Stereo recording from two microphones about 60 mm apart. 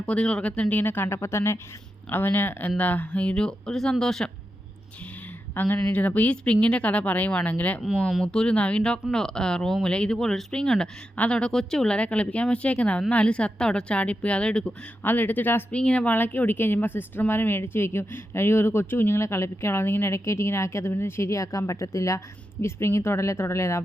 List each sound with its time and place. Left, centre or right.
0.0 s speech: centre
1.0 s speech: left
2.0 s speech: left; by 4.3 s centre
5.5 s speech: left
8.2 s speech: centre
15.0 s speech: left
15.7 s speech: centre
16.0 s speech: left
19.2 s speech: left
22.6 s speech: left